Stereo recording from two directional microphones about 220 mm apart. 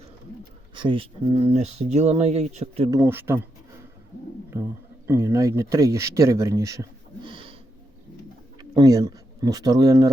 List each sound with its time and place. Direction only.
0.8 s speech: 25° right (ahead or behind)
2.9 s speech: 10° right (ahead or behind)
5.0 s speech: 15° right (ahead or behind)
8.7 s speech: 15° right (ahead or behind)